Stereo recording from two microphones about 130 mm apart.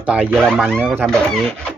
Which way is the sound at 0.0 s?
10° right (ahead or behind).